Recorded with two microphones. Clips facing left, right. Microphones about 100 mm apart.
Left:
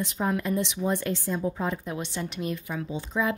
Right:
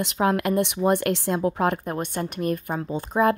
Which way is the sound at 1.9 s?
50° right (ahead or behind).